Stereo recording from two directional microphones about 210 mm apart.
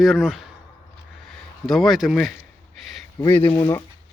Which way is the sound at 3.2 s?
10° left (ahead or behind).